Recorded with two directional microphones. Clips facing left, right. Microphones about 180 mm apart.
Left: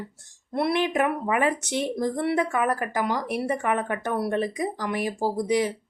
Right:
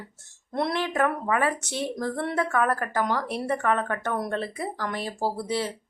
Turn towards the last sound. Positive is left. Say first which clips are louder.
# left 4 dB
turn(degrees=15)  # may be behind; listen again after turning